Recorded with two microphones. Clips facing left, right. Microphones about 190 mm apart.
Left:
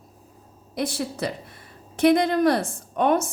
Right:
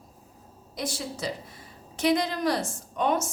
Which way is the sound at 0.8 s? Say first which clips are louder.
Left 6 dB; 60° left (ahead or behind).